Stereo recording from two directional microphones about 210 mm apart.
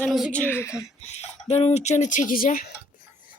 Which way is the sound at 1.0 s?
30° left (ahead or behind).